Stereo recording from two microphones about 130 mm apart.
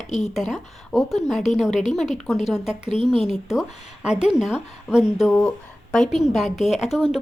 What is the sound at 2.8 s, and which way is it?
Speech, 40° right (ahead or behind).